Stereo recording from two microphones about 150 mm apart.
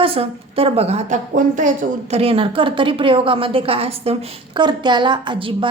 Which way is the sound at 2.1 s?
40° right (ahead or behind).